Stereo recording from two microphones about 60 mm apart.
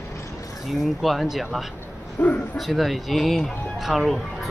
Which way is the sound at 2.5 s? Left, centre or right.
Centre.